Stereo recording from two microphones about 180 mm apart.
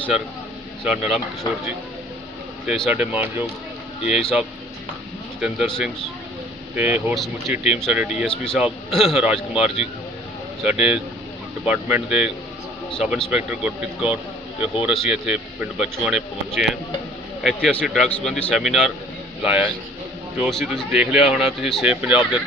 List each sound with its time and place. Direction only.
0.9 s a man's voice: 5° right (ahead or behind)
2.6 s a man's voice: centre (ahead or behind)